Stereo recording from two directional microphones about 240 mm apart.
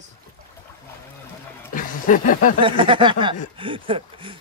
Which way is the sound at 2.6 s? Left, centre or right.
Right.